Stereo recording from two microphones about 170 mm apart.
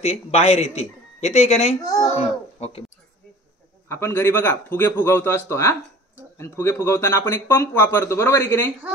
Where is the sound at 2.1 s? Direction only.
35° left (ahead or behind).